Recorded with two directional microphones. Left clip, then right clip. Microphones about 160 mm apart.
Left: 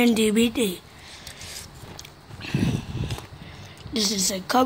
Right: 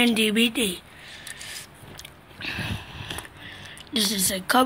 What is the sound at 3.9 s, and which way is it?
Speech, 15° left (ahead or behind).